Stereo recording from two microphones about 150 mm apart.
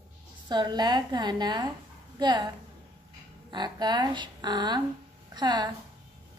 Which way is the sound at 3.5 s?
30° right (ahead or behind).